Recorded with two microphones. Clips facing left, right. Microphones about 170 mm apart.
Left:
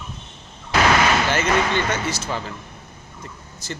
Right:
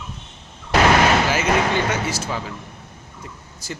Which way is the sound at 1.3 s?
10° right (ahead or behind).